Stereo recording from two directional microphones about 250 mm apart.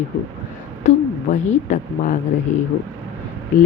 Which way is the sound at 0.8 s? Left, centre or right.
Left.